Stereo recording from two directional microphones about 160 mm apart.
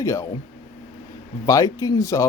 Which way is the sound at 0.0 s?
20° left (ahead or behind).